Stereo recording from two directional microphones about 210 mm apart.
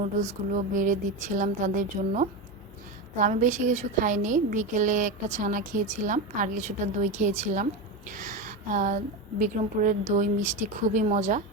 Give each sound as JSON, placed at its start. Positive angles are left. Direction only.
{"t": 0.0, "sound": "a woman's voice", "side_deg": -35}